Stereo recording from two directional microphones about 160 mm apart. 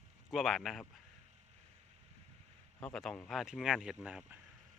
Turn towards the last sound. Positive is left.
turn(degrees=-5)  # may be behind; listen again after turning